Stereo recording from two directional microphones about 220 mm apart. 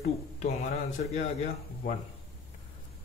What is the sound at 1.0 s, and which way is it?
Speech, 35° left (ahead or behind).